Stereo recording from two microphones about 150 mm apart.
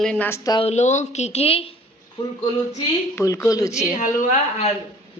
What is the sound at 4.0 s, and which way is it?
Speech, 55° left (ahead or behind).